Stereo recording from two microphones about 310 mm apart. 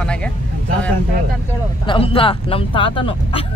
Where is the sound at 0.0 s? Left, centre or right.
Centre.